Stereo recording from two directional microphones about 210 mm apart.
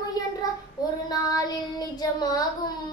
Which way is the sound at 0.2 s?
20° left (ahead or behind).